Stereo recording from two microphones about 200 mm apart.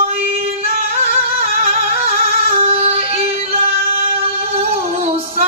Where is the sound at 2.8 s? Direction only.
30° right (ahead or behind).